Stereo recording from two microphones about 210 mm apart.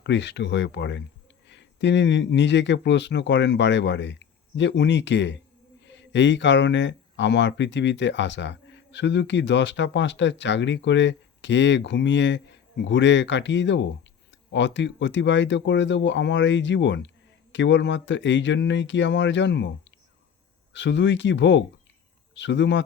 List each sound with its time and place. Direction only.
0.0 s speech: 55° left (ahead or behind)